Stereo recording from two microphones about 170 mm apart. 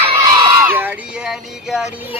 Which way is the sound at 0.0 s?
30° right (ahead or behind).